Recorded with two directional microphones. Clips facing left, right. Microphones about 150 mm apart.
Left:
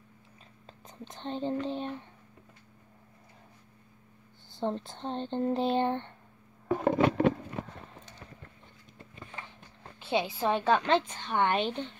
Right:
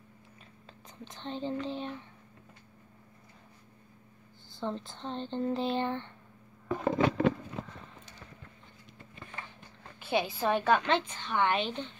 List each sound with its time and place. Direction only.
0.7 s whispering: 45° left (ahead or behind)
4.6 s speech: 50° left (ahead or behind)
6.7 s a sound: 55° left (ahead or behind)
9.9 s a woman's voice: 25° left (ahead or behind)
11.1 s speech: 45° left (ahead or behind)